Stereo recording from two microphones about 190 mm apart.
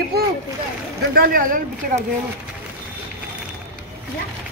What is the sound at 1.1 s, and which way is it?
Speech, 50° right (ahead or behind).